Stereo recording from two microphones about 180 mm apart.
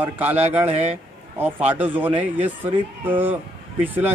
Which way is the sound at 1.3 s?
10° right (ahead or behind).